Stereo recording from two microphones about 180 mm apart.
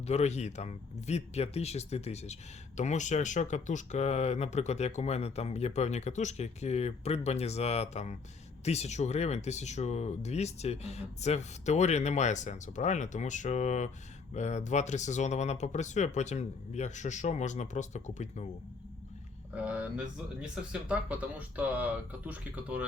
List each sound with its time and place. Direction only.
0.0 s speech: 35° left (ahead or behind)
19.5 s speech: 10° right (ahead or behind)